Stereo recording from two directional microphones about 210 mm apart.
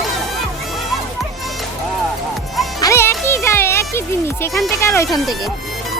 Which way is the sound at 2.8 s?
15° left (ahead or behind).